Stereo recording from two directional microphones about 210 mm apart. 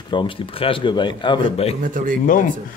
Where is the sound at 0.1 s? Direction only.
25° left (ahead or behind).